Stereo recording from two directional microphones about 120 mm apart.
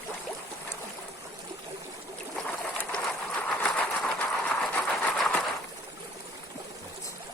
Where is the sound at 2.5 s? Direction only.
10° left (ahead or behind).